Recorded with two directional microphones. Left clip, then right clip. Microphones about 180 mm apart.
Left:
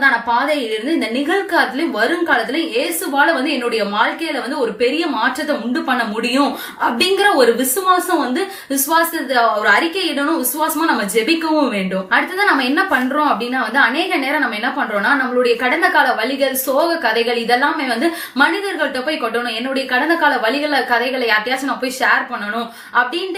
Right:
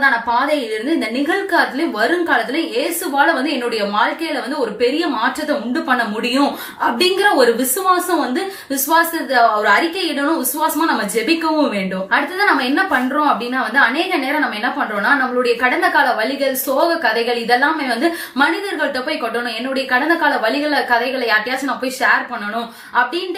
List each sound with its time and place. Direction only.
0.0 s a woman's voice: 15° left (ahead or behind)
23.0 s a woman's voice: 15° left (ahead or behind)